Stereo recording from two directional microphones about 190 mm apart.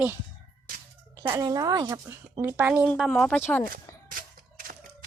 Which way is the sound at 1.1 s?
20° right (ahead or behind).